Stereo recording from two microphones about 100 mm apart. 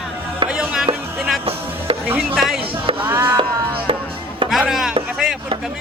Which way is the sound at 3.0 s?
20° right (ahead or behind).